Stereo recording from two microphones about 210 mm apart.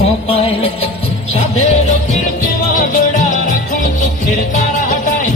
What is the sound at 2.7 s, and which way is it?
Music, 40° left (ahead or behind).